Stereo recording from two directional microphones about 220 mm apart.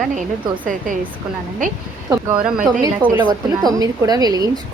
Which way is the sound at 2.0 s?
10° right (ahead or behind).